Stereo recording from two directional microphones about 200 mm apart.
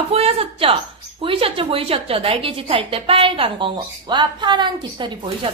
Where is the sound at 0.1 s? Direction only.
30° right (ahead or behind).